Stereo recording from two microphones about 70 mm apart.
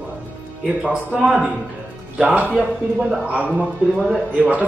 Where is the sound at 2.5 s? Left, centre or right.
Centre.